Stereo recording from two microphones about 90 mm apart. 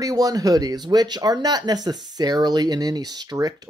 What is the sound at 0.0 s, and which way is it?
Speech, 40° right (ahead or behind).